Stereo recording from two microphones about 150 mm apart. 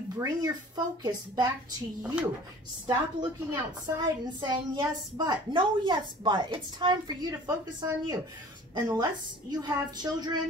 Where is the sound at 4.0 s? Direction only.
30° right (ahead or behind).